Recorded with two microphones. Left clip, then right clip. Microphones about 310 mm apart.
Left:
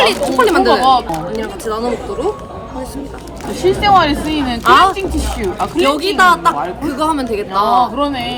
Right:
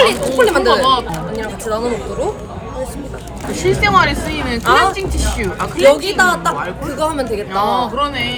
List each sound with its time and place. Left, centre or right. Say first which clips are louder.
0.0 s a sound: even; centre
3.6 s speech: left 2 dB; centre
4.6 s a woman's voice: left 3 dB; centre
5.9 s a woman's voice: left 2 dB; centre
7.7 s speech: left 3 dB; centre